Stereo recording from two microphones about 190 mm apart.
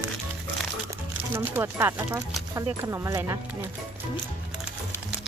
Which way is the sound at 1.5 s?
10° right (ahead or behind).